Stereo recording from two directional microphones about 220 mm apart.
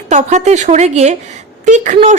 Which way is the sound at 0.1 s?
30° right (ahead or behind).